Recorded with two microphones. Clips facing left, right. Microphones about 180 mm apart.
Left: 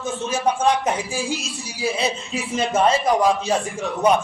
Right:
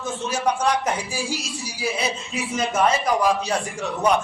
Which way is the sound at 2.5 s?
30° left (ahead or behind).